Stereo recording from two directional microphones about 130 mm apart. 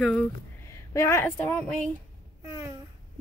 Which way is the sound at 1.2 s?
10° left (ahead or behind).